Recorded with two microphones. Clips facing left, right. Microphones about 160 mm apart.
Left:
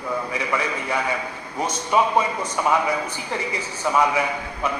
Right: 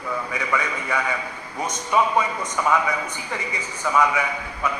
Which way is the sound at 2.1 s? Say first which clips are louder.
Left 1 dB; 30° left (ahead or behind).